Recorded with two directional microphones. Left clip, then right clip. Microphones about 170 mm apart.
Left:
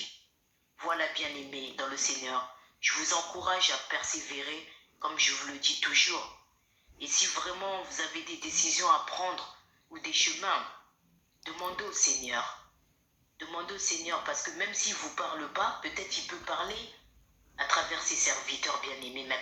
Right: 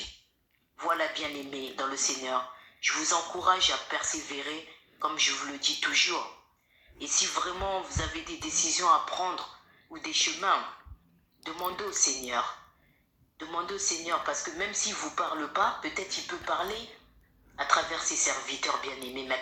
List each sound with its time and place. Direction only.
0.8 s a woman's voice: 35° right (ahead or behind)